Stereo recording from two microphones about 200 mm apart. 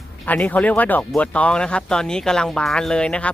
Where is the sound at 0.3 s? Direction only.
10° left (ahead or behind).